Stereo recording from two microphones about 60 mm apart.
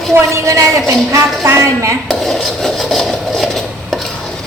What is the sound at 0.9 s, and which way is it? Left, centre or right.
A woman's voice, right.